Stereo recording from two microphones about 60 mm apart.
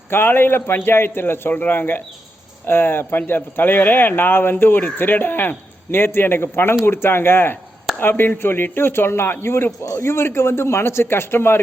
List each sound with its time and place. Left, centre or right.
0.1 s a man's voice: left